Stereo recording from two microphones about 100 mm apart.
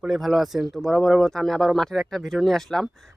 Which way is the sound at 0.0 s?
5° right (ahead or behind).